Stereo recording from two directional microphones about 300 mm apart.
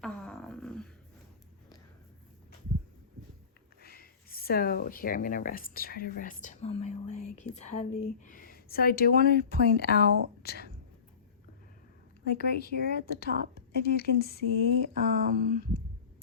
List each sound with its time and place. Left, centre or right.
0.0 s beatboxing: centre
3.8 s a woman's voice: left
12.2 s speech: left
14.9 s speech: right